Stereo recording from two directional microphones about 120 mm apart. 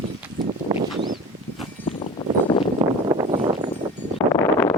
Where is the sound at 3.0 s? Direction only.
40° right (ahead or behind).